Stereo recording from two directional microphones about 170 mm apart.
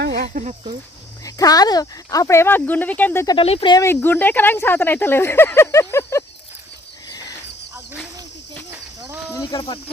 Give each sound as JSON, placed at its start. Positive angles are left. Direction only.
{"t": 0.0, "sound": "a sound", "side_deg": -75}
{"t": 0.3, "sound": "speech", "side_deg": -45}
{"t": 1.2, "sound": "speech", "side_deg": 20}
{"t": 3.3, "sound": "speech", "side_deg": 35}
{"t": 3.8, "sound": "speech", "side_deg": 10}
{"t": 7.1, "sound": "wild animals", "side_deg": 20}
{"t": 9.3, "sound": "speech", "side_deg": 20}